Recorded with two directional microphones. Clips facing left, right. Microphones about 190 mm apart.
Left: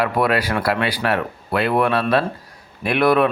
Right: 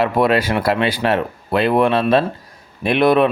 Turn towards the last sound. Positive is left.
turn(degrees=-20)  # may be behind; listen again after turning